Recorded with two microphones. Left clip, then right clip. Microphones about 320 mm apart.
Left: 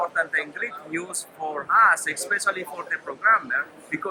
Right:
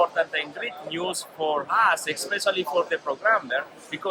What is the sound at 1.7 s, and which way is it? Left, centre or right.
Speech, centre.